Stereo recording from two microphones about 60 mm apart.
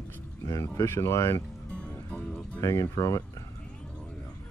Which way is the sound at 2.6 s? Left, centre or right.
Left.